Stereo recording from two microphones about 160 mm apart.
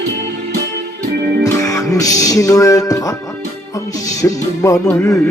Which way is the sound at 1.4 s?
20° left (ahead or behind).